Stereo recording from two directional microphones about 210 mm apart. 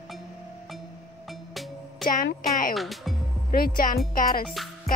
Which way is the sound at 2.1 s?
40° left (ahead or behind).